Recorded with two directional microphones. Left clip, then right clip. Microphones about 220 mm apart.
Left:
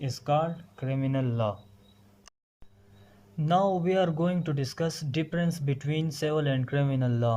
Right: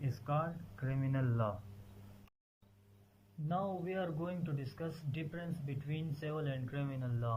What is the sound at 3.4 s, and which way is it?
Speech, 35° left (ahead or behind).